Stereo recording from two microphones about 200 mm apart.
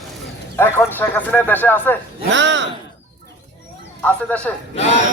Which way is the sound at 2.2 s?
65° right (ahead or behind).